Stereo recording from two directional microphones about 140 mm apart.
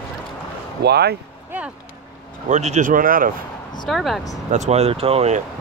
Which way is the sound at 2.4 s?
55° right (ahead or behind).